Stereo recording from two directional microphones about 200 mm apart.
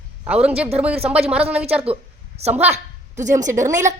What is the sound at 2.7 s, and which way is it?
A woman's voice, 35° right (ahead or behind).